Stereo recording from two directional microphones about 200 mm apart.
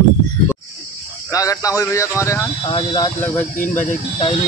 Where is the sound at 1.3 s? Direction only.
15° left (ahead or behind).